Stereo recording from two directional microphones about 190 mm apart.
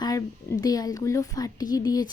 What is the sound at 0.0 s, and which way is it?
Speech, 20° left (ahead or behind).